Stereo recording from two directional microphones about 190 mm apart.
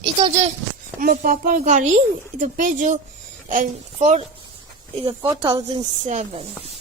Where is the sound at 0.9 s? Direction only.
45° right (ahead or behind).